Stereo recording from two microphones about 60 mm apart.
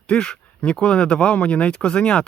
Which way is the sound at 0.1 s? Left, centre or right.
Centre.